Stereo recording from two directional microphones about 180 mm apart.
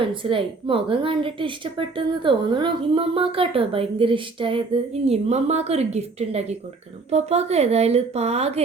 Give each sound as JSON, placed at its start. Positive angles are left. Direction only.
{"t": 0.0, "sound": "a woman's voice", "side_deg": -30}